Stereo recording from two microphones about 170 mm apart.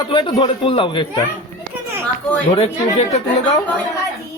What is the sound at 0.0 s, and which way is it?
Speech, 25° left (ahead or behind).